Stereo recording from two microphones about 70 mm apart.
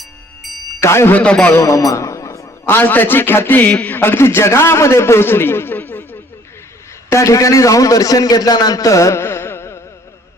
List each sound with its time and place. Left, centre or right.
0.0 s music: centre
0.8 s a man's voice: left
1.1 s a man's voice: centre
1.5 s a sound: left
2.7 s a man's voice: left
3.9 s a man's voice: left
7.1 s a man's voice: left
9.2 s carnatic music: left